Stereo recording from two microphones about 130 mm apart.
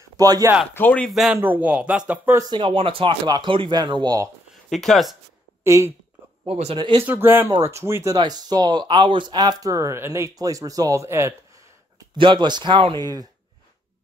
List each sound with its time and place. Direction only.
0.2 s speech: 25° right (ahead or behind)
0.7 s speech: 10° left (ahead or behind)
1.3 s speech: 15° right (ahead or behind)
2.5 s speech: 40° right (ahead or behind)
4.6 s speech: centre (ahead or behind)
5.6 s speech: 20° right (ahead or behind)
6.4 s speech: 45° right (ahead or behind)
7.0 s speech: 15° right (ahead or behind)
8.2 s speech: 30° right (ahead or behind)
12.2 s speech: 35° right (ahead or behind)